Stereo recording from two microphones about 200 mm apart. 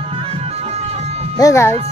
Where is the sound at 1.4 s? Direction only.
15° left (ahead or behind).